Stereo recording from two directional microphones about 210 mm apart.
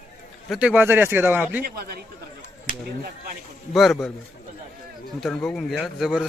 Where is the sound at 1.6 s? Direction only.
50° right (ahead or behind).